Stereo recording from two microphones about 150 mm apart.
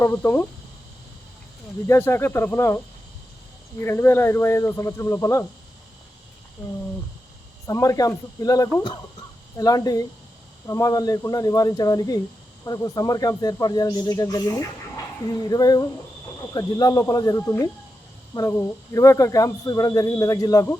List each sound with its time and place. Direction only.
0.0 s speech: 15° left (ahead or behind)
1.9 s speech: 15° left (ahead or behind)
7.7 s speech: 20° left (ahead or behind)